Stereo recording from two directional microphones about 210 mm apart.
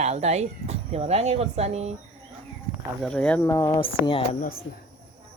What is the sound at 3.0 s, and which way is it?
Speech, 5° left (ahead or behind).